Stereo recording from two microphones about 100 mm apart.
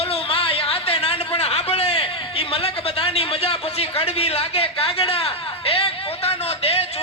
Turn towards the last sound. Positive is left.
turn(degrees=85)